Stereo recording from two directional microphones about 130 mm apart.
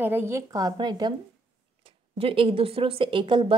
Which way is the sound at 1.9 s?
45° right (ahead or behind).